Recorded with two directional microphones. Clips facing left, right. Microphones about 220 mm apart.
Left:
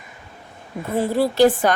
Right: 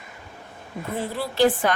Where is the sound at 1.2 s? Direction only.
40° left (ahead or behind).